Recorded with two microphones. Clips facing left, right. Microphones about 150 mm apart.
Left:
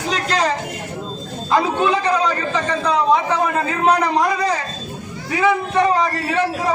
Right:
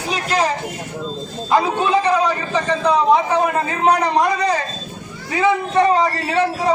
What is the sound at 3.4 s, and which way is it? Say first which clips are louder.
Speech: even; 20° right (ahead or behind).